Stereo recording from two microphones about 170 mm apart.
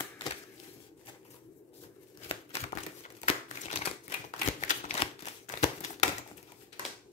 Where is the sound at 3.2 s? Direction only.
35° left (ahead or behind).